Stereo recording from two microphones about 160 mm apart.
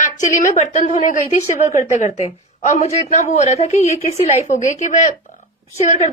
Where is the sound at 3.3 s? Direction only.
45° left (ahead or behind).